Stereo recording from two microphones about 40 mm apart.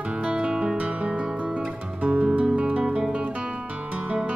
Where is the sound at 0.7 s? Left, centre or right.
Right.